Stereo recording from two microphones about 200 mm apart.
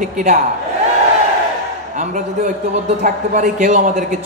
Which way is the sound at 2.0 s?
40° right (ahead or behind).